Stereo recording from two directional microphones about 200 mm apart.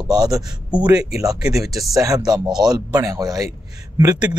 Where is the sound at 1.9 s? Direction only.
15° right (ahead or behind).